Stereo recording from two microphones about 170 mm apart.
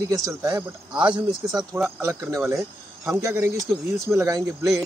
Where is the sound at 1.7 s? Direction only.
15° right (ahead or behind).